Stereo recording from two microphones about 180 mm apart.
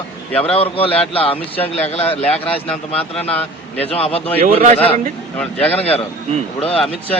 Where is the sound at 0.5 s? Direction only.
30° left (ahead or behind).